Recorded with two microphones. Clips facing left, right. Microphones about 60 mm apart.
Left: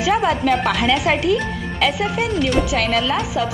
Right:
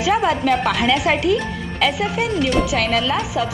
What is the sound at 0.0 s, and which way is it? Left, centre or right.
Speech, centre.